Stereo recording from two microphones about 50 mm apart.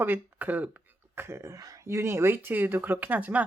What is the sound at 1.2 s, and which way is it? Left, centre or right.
Speech, right.